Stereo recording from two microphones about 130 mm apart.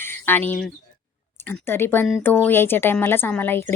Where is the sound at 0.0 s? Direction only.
15° left (ahead or behind).